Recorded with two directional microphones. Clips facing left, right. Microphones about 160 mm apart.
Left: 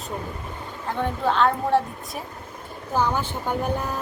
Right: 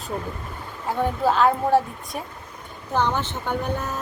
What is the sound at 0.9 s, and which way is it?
A woman's voice, 5° right (ahead or behind).